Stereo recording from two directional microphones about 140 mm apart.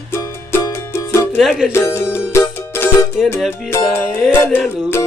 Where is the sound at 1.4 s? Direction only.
5° right (ahead or behind).